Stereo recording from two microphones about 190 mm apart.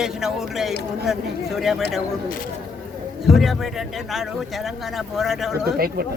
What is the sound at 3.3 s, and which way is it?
A man's voice, centre (ahead or behind).